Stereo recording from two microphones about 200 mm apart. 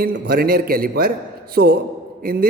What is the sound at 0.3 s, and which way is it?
A man's voice, 45° right (ahead or behind).